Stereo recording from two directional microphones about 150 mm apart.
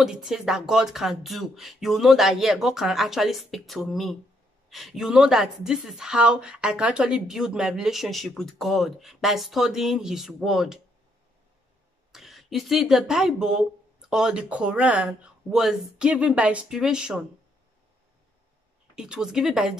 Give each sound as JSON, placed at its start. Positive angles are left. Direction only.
{"t": 0.0, "sound": "speech", "side_deg": -5}
{"t": 12.1, "sound": "speech", "side_deg": 0}
{"t": 18.9, "sound": "speech", "side_deg": -5}